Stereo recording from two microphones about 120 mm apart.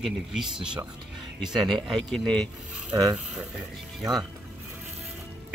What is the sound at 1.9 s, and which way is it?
Speech, centre (ahead or behind).